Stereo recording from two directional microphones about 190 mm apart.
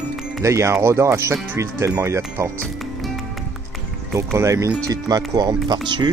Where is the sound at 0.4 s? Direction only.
15° right (ahead or behind).